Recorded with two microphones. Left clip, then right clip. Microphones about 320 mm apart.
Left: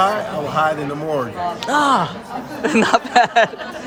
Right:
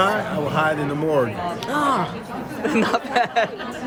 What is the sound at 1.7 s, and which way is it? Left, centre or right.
Speech, left.